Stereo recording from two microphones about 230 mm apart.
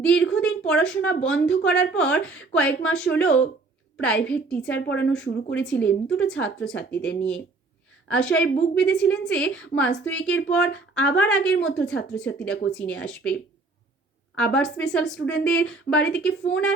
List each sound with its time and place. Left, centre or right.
0.0 s speech: centre
4.7 s speech: left
5.6 s speech: centre
14.3 s speech: centre